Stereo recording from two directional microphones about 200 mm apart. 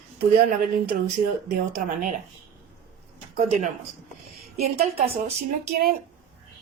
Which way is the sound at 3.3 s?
35° right (ahead or behind).